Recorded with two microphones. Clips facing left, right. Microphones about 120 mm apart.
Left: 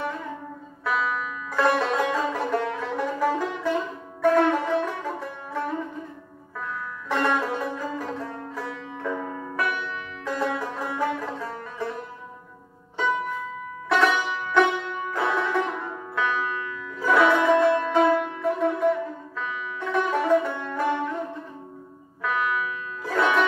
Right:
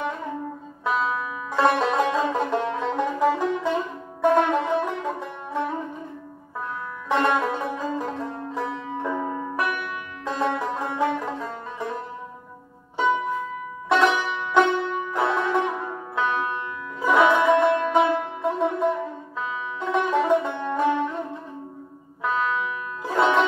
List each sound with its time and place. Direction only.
0.8 s music: 25° right (ahead or behind)
7.1 s music: 20° right (ahead or behind)
13.8 s music: 20° right (ahead or behind)
17.1 s music: 15° right (ahead or behind)
22.2 s music: 25° right (ahead or behind)